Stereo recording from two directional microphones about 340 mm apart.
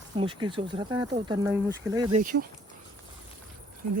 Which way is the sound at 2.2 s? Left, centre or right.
Right.